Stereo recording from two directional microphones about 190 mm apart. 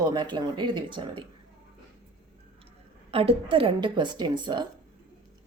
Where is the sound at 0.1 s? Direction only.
25° right (ahead or behind).